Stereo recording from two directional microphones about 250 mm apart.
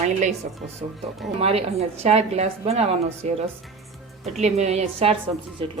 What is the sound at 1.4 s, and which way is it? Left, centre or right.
A woman's voice, right.